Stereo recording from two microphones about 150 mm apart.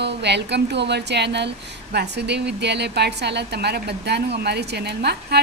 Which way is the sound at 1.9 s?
90° right.